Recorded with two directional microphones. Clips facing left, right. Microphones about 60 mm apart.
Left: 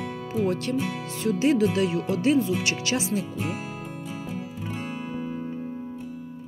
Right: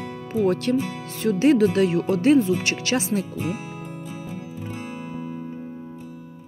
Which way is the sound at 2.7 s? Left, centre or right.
Right.